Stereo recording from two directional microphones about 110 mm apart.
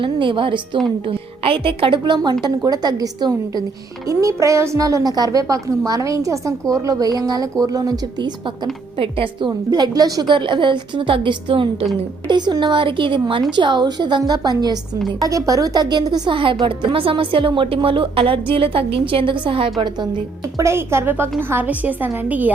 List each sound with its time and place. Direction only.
0.0 s a woman's voice: 50° right (ahead or behind)
9.5 s a woman's voice: 35° right (ahead or behind); by 19.7 s 55° right (ahead or behind)
20.4 s a woman's voice: 25° right (ahead or behind)